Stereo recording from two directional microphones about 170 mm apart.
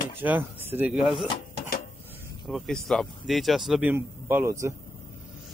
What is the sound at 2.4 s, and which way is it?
Speech, centre (ahead or behind).